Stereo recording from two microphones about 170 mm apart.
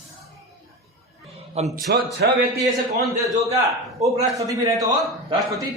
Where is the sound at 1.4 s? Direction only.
40° right (ahead or behind).